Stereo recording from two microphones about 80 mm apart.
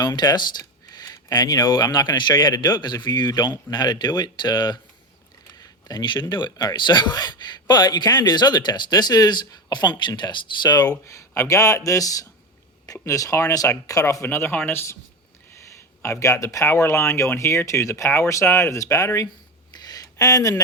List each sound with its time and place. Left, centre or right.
0.0 s speech: left
0.9 s speech: left
11.0 s speech: left
14.3 s speech: left
16.2 s speech: left
19.7 s a sound: left